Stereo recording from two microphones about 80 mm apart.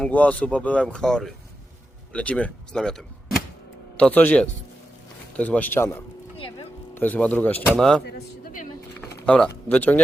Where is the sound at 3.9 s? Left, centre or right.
Centre.